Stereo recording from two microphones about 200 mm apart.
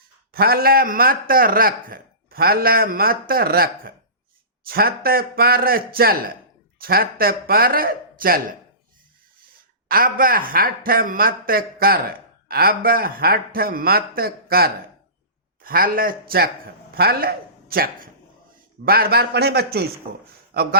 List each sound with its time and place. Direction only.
0.3 s a man's voice: 50° right (ahead or behind)
9.9 s a man's voice: 45° right (ahead or behind)